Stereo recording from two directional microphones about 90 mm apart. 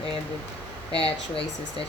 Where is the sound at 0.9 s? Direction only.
90° left.